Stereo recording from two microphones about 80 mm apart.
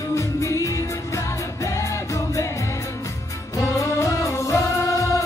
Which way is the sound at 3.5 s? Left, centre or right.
Left.